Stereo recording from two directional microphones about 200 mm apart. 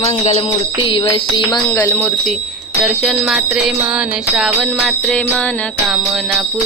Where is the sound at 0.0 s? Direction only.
30° left (ahead or behind).